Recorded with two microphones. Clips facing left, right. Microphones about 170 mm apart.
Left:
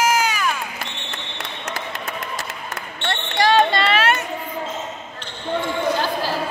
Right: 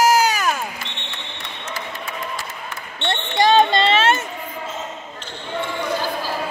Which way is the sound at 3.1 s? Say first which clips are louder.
Right 2 dB; 20° right (ahead or behind).